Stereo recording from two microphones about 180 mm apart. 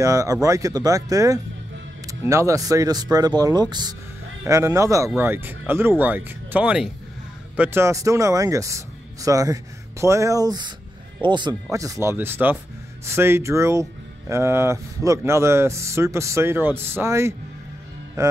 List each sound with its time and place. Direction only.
0.0 s speech: 20° right (ahead or behind)